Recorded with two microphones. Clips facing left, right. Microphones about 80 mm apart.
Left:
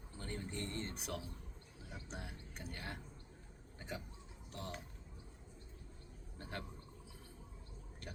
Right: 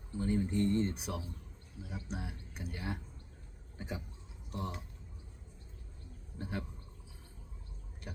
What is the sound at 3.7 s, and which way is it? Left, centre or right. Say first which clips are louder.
Vehicle: right 4 dB; centre.